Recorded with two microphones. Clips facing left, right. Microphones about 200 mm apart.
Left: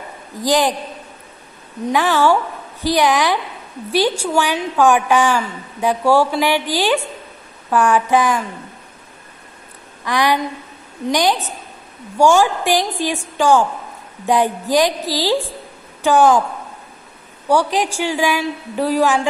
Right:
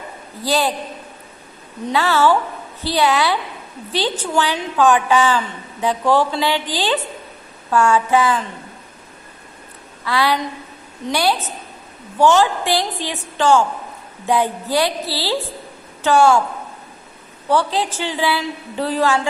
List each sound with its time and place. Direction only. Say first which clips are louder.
0.4 s a woman's voice: left 3 dB; 15° left (ahead or behind)
1.9 s a woman's voice: left 1 dB; 15° left (ahead or behind)
10.0 s a woman's voice: left 1 dB; 15° left (ahead or behind)
17.5 s a woman's voice: left 2 dB; 15° left (ahead or behind)